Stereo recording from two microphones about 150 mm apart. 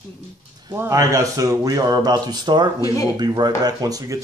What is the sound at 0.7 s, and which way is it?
Speech, 20° right (ahead or behind).